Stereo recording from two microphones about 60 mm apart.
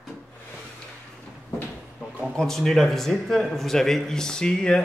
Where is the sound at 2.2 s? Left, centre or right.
Centre.